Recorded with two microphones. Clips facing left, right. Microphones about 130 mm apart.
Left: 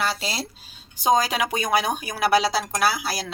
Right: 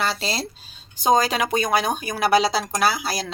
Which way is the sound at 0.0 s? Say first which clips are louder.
Right 2 dB; 10° left (ahead or behind).